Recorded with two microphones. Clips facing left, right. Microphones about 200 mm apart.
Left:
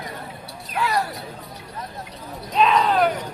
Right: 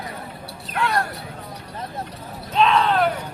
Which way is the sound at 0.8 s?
Centre (ahead or behind).